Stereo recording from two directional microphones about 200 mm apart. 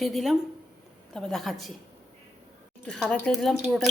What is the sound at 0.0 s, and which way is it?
A woman's voice, centre (ahead or behind).